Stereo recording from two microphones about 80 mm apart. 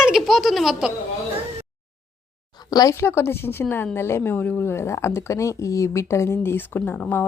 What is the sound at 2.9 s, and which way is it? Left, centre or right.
A woman's voice, left.